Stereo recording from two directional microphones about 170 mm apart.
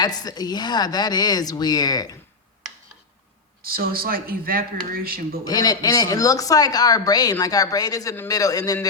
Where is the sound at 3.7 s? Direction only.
60° right (ahead or behind).